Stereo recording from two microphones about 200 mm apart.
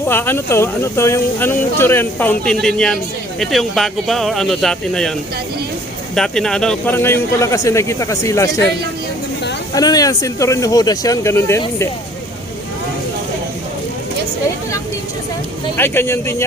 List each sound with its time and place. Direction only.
0.1 s speech: 10° left (ahead or behind)
6.1 s speech: 5° left (ahead or behind)
9.7 s speech: 20° left (ahead or behind)
15.8 s speech: 10° left (ahead or behind)